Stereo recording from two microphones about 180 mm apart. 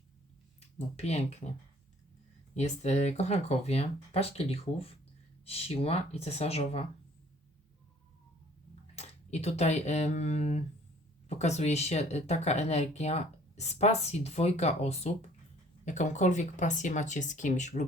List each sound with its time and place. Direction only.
0.9 s speech: 35° left (ahead or behind)
2.6 s speech: 40° left (ahead or behind)
9.0 s speech: 35° left (ahead or behind)